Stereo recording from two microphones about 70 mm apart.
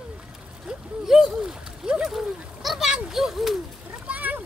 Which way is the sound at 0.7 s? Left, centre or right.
Centre.